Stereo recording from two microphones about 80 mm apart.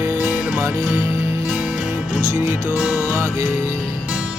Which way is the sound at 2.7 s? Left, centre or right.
Centre.